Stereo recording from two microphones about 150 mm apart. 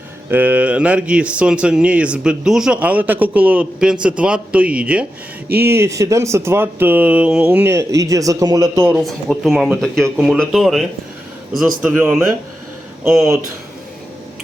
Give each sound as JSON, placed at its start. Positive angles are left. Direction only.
{"t": 0.3, "sound": "speech", "side_deg": -10}
{"t": 8.9, "sound": "speech", "side_deg": 0}